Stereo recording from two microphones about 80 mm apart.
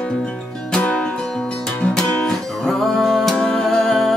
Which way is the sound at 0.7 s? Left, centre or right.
Centre.